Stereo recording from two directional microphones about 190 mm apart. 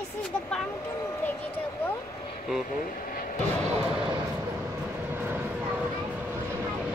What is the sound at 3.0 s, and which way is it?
Vehicle, 45° left (ahead or behind).